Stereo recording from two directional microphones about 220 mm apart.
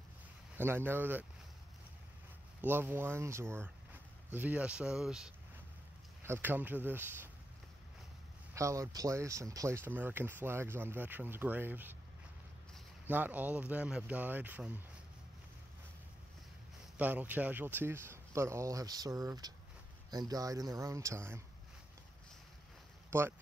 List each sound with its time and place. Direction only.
0.6 s speech: 10° right (ahead or behind)
2.6 s speech: 10° right (ahead or behind)
8.5 s speech: 15° right (ahead or behind)
16.9 s speech: 10° right (ahead or behind)
23.0 s a sound: 10° right (ahead or behind)